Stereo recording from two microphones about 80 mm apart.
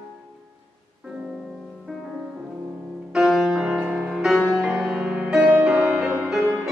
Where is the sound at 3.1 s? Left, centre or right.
Centre.